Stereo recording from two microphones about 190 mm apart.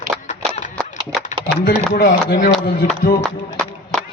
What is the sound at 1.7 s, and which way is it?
Speech, 55° left (ahead or behind).